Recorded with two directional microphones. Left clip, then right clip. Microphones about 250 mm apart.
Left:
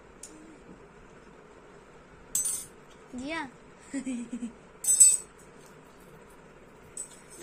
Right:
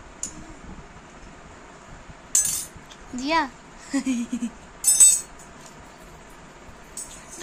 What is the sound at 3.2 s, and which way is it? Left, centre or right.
A child's voice, centre.